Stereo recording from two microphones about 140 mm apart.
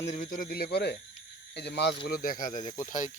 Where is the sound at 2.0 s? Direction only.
90° left; by 3.1 s 60° left (ahead or behind).